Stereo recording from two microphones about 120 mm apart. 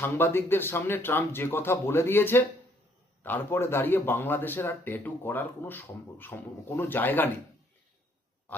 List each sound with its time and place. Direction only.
0.0 s speech: 20° left (ahead or behind)